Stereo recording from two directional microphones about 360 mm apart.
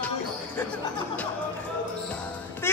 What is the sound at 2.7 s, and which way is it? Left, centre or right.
Music, centre.